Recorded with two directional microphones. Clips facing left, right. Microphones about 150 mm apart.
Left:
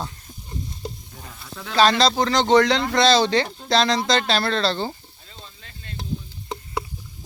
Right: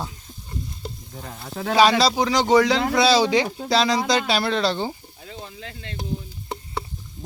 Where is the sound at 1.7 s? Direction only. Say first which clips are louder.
Right 1 dB; 10° right (ahead or behind).